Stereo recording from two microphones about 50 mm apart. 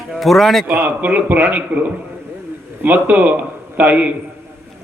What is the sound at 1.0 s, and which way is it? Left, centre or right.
Speech, right.